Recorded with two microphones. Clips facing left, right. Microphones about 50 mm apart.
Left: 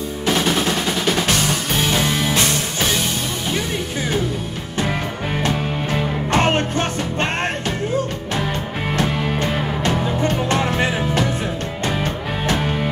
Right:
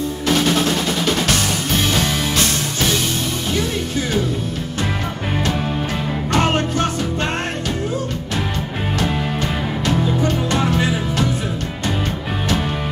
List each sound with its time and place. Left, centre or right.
6.3 s music: left
9.8 s music: left